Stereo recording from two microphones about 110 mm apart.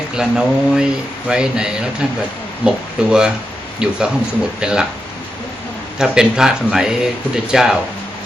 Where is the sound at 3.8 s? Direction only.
10° right (ahead or behind).